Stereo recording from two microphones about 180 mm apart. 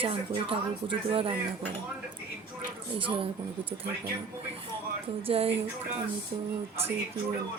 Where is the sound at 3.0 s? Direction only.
30° right (ahead or behind).